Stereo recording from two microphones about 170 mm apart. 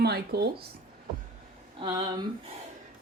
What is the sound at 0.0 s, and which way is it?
Speech, 70° right (ahead or behind).